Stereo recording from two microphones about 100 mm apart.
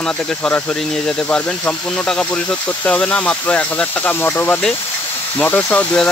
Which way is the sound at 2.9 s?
10° left (ahead or behind).